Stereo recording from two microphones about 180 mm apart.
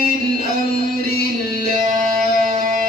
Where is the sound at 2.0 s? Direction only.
50° right (ahead or behind).